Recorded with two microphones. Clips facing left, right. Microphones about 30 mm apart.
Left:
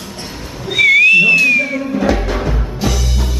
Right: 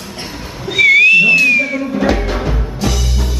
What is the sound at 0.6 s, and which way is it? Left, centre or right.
Music, centre.